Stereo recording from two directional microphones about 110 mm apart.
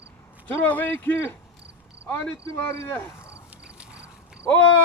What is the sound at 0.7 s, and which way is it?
Speech, 15° left (ahead or behind).